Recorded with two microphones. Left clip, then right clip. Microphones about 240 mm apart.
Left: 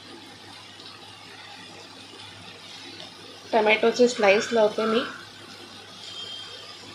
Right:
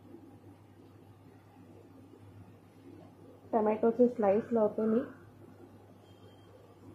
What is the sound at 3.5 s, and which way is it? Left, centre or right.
Speech, centre.